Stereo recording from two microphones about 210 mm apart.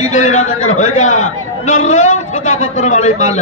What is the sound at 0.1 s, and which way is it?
Speech, 35° left (ahead or behind).